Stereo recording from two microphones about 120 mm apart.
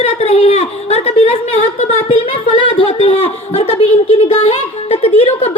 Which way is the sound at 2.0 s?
50° left (ahead or behind).